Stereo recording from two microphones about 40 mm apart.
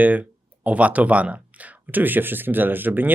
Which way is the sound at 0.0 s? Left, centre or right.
Right.